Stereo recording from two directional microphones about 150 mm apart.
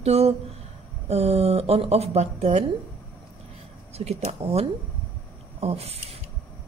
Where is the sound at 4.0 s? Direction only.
45° right (ahead or behind).